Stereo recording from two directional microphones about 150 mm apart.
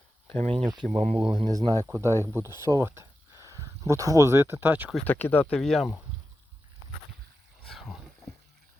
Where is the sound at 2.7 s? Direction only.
20° right (ahead or behind).